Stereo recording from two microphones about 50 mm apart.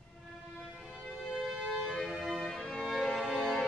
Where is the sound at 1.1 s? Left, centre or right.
Centre.